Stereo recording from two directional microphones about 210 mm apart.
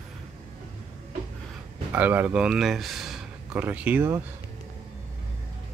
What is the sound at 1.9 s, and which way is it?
Speech, 10° right (ahead or behind).